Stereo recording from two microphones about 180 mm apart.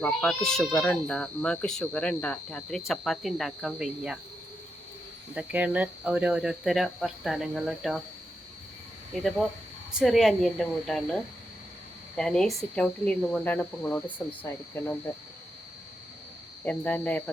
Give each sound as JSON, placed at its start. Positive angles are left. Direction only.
{"t": 0.0, "sound": "speech", "side_deg": 5}
{"t": 5.3, "sound": "speech", "side_deg": -10}
{"t": 9.2, "sound": "speech", "side_deg": 0}
{"t": 16.6, "sound": "speech", "side_deg": 10}